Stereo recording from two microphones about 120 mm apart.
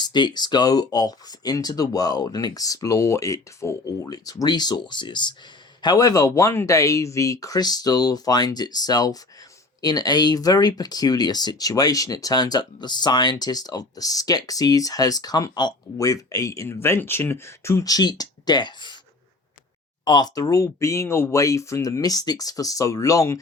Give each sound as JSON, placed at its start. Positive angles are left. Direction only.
{"t": 0.0, "sound": "speech", "side_deg": 40}
{"t": 20.1, "sound": "speech", "side_deg": 35}